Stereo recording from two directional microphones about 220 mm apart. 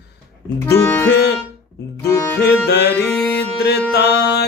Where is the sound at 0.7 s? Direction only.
10° left (ahead or behind).